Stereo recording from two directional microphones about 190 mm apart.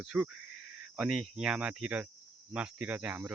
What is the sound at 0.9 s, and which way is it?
Speech, 5° right (ahead or behind).